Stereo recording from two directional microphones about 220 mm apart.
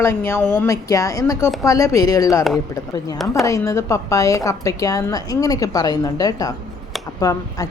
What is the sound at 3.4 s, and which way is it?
A woman's voice, 15° left (ahead or behind).